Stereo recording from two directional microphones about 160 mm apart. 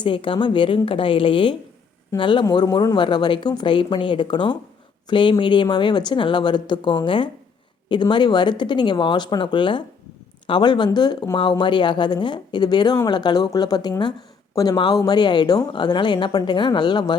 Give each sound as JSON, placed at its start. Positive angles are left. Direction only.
{"t": 0.0, "sound": "a woman's voice", "side_deg": 30}